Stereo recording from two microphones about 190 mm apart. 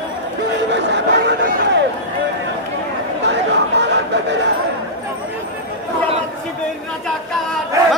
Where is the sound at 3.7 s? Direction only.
65° right (ahead or behind).